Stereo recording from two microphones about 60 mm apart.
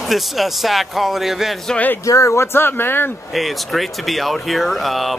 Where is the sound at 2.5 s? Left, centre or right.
Left.